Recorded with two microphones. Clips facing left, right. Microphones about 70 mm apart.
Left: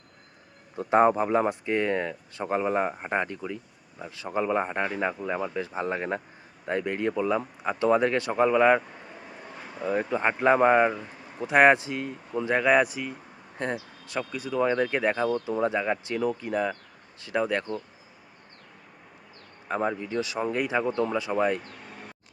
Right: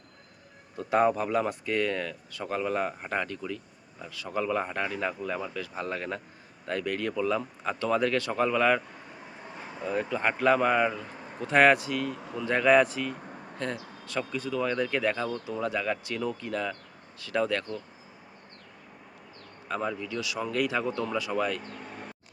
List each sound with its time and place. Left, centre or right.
0.8 s speech: left
9.8 s speech: left
11.3 s speech: centre
12.5 s speech: centre
19.6 s speech: left